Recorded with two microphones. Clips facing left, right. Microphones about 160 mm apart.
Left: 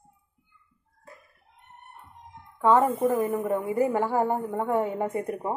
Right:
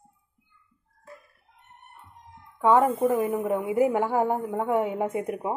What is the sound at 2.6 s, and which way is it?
A woman's voice, 15° right (ahead or behind).